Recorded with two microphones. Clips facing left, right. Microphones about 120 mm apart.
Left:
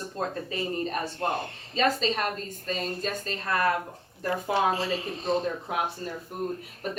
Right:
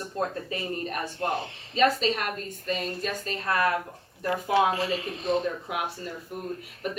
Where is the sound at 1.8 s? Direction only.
35° left (ahead or behind).